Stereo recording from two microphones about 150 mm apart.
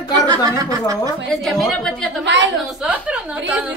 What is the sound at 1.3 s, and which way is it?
A woman's voice, centre (ahead or behind).